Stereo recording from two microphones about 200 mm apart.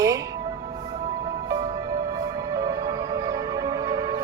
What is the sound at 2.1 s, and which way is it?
Music, 20° right (ahead or behind).